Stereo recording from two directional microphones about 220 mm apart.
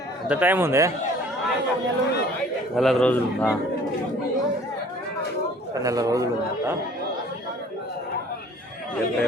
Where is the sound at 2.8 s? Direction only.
Centre (ahead or behind).